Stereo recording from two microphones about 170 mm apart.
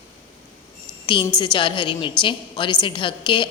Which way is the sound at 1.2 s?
25° left (ahead or behind).